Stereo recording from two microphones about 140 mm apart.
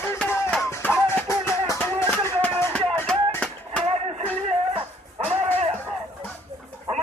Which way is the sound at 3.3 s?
10° left (ahead or behind).